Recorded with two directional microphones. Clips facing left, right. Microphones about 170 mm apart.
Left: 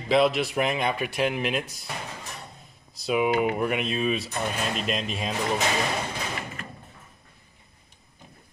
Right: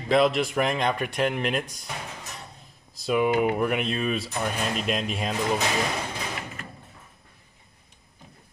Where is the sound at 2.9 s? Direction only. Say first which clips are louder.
Right 1 dB; centre (ahead or behind).